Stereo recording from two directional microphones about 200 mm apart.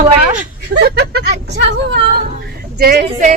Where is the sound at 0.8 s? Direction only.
55° right (ahead or behind).